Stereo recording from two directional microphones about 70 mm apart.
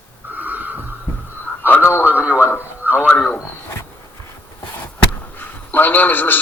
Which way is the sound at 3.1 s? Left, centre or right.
Centre.